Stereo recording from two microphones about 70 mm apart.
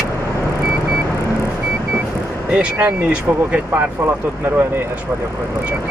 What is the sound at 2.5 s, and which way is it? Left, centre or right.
Speech, centre.